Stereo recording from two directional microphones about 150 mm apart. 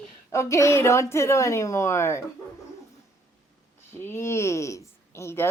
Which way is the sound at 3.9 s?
15° left (ahead or behind).